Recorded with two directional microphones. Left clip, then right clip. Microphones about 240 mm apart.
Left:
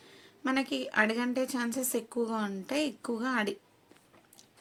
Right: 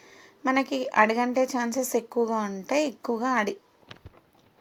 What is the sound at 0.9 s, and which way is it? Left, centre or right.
A woman's voice, centre.